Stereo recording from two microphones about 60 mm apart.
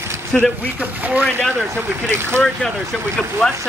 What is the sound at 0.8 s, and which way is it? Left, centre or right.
Speech, right.